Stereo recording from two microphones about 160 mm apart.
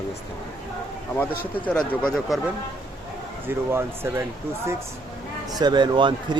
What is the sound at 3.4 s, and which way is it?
Speech, 15° right (ahead or behind).